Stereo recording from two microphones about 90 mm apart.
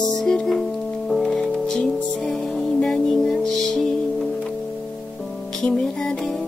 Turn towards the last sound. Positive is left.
turn(degrees=5)  # may be behind; listen again after turning